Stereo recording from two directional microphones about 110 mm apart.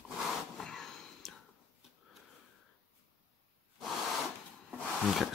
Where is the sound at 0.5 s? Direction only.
5° left (ahead or behind).